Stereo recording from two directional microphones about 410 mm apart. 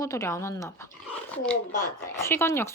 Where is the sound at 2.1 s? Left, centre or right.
Centre.